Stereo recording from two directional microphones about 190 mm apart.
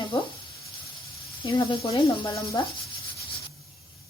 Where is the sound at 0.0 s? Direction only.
25° left (ahead or behind).